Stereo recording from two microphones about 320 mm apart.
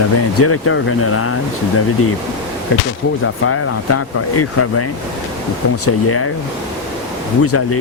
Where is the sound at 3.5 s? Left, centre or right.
Left.